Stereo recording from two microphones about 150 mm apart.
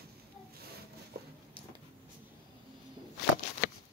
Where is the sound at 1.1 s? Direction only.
90° right.